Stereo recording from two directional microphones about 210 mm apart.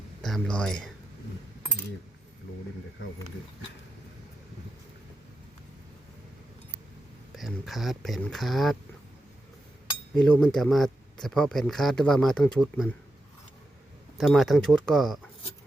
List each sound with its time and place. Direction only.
0.2 s speech: centre (ahead or behind)
7.3 s speech: centre (ahead or behind)
10.2 s speech: 5° left (ahead or behind)
14.2 s speech: centre (ahead or behind)